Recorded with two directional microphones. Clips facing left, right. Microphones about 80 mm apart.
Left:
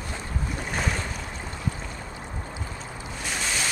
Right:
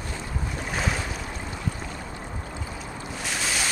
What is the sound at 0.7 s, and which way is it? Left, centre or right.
Boat, centre.